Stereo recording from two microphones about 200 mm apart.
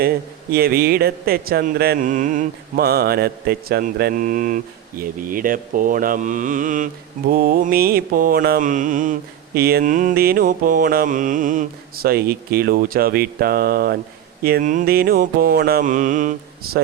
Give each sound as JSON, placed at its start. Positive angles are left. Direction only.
{"t": 0.5, "sound": "speech", "side_deg": -50}